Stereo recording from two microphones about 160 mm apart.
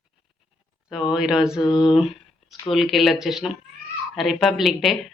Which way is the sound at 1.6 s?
30° left (ahead or behind).